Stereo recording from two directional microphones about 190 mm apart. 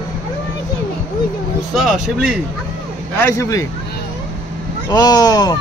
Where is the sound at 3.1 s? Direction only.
15° left (ahead or behind).